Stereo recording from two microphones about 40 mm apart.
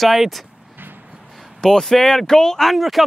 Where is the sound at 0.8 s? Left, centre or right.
Right.